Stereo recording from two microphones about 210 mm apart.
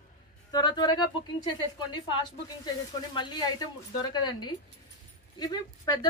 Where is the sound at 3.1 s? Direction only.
20° left (ahead or behind).